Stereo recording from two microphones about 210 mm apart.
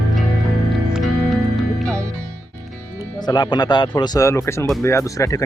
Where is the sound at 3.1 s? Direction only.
20° left (ahead or behind).